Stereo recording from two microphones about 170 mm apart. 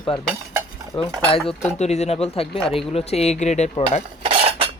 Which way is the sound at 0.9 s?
30° left (ahead or behind).